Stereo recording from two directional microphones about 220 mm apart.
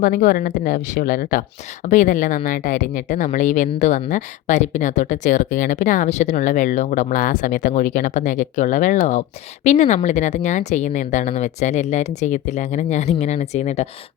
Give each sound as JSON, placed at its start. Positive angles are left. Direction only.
{"t": 0.0, "sound": "speech", "side_deg": 35}